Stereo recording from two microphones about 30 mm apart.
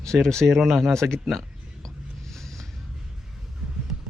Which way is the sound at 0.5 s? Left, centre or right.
Centre.